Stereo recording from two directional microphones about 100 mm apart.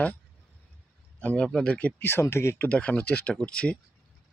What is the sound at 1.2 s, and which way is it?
Speech, 10° left (ahead or behind).